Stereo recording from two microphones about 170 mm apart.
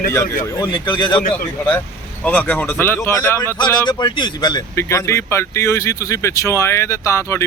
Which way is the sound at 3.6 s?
25° left (ahead or behind).